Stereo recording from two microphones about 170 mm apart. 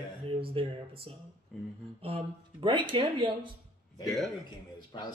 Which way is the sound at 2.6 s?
30° right (ahead or behind).